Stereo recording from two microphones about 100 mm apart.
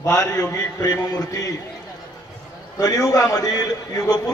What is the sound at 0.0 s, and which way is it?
A man's voice, 30° left (ahead or behind).